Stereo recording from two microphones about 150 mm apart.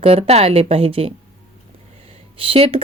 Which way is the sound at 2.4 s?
40° right (ahead or behind).